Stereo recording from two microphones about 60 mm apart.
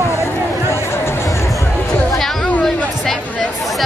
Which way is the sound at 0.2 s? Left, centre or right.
Left.